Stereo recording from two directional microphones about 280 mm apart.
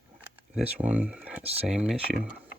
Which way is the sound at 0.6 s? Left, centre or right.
Centre.